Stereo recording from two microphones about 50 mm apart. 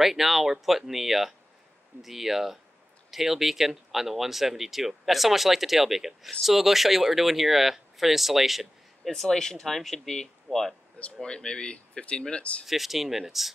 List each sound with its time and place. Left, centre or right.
0.0 s speech: centre
9.1 s speech: centre
11.2 s speech: centre
12.6 s speech: centre